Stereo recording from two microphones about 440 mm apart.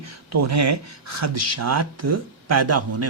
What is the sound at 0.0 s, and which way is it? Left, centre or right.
Speech, right.